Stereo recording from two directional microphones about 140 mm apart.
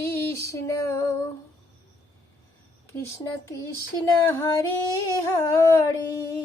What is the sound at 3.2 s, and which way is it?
Humming, 25° left (ahead or behind).